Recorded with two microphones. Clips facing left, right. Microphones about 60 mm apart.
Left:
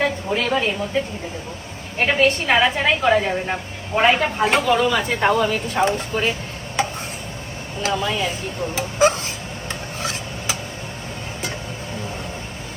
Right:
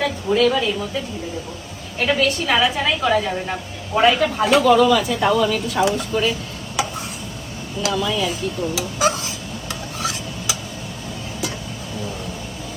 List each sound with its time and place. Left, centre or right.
0.0 s a woman's voice: left
5.0 s a woman's voice: left
7.8 s speech: left
10.0 s filing: left